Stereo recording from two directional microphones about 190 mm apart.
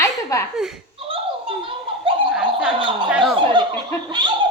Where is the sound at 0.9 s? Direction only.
30° right (ahead or behind).